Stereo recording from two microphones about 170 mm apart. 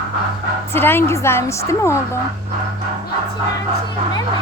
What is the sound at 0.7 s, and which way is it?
Speech, 15° left (ahead or behind).